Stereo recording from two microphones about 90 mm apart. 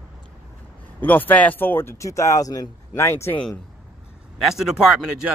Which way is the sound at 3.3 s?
10° left (ahead or behind).